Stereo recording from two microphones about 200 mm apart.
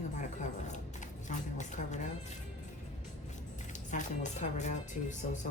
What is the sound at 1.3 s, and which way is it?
Speech, 35° left (ahead or behind).